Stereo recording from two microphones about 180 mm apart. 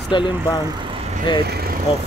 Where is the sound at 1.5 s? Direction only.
60° right (ahead or behind).